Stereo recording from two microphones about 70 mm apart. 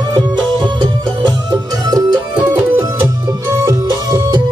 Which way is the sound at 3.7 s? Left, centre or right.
Right.